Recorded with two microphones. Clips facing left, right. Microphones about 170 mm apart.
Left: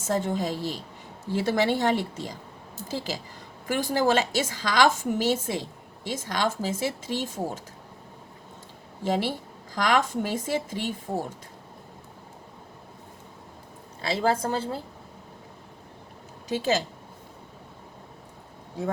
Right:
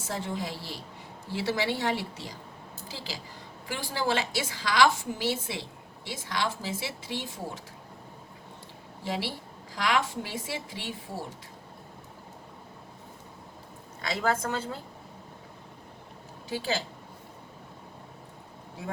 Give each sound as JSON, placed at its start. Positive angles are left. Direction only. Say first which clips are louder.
{"t": 0.1, "sound": "speech", "louder": "left 7 dB", "side_deg": 45}
{"t": 0.5, "sound": "a woman's voice", "louder": "left 9 dB", "side_deg": 15}
{"t": 1.3, "sound": "speech", "louder": "left 5 dB", "side_deg": 50}
{"t": 9.0, "sound": "speech", "louder": "left 7 dB", "side_deg": 45}
{"t": 14.0, "sound": "a woman's voice", "louder": "left 4 dB", "side_deg": 30}